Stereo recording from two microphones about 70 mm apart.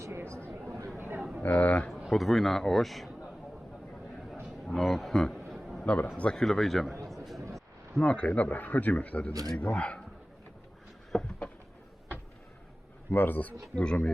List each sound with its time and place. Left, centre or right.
0.9 s a sound: right
1.4 s speech: left
2.0 s a man's voice: centre
4.4 s a sound: centre
5.8 s a man's voice: left; by 6.9 s centre
7.1 s a sound: centre
7.5 s speech: centre
11.1 s a man's voice: centre
13.1 s a man's voice: left
13.7 s speech: centre